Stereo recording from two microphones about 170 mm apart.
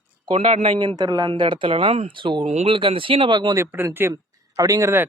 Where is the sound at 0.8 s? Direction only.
25° right (ahead or behind).